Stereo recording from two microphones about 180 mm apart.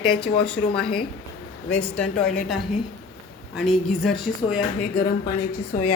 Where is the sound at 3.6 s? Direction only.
Centre (ahead or behind).